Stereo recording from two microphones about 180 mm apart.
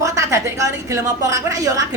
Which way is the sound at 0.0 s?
15° right (ahead or behind).